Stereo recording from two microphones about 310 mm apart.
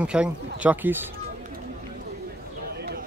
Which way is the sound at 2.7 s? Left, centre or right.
Right.